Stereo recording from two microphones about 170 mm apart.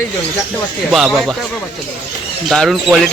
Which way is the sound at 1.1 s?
Centre (ahead or behind).